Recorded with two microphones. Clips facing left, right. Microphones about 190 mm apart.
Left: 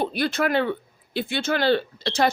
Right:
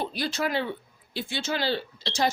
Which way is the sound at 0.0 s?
55° left (ahead or behind).